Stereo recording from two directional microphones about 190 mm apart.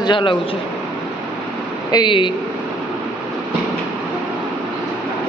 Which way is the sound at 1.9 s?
25° left (ahead or behind).